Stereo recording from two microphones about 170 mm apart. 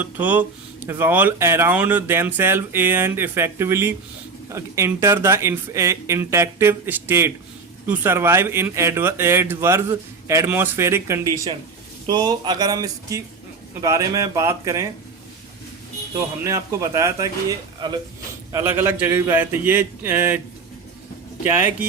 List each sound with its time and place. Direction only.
0.0 s speech: 10° right (ahead or behind)
16.4 s a man's voice: 20° right (ahead or behind)
18.5 s speech: 15° right (ahead or behind)
21.5 s speech: 10° right (ahead or behind)